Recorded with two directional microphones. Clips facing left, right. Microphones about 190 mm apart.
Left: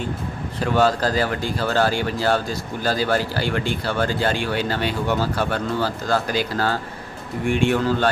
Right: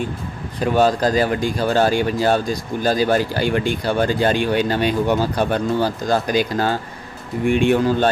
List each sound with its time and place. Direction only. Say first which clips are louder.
0.6 s speech: right 3 dB; 15° right (ahead or behind)